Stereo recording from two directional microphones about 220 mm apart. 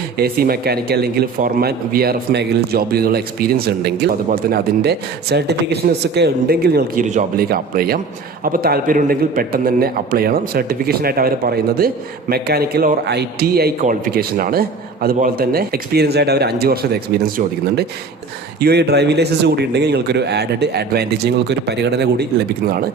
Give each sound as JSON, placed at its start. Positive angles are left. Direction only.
{"t": 0.2, "sound": "speech", "side_deg": -45}
{"t": 18.6, "sound": "speech", "side_deg": -50}